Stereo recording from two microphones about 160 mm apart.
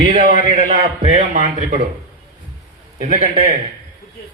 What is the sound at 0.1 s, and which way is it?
A man's voice, 50° right (ahead or behind).